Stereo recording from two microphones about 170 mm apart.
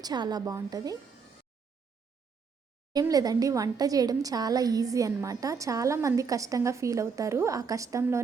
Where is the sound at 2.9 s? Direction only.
20° right (ahead or behind).